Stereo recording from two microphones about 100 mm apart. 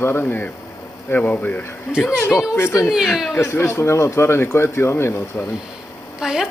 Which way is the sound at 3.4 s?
25° left (ahead or behind).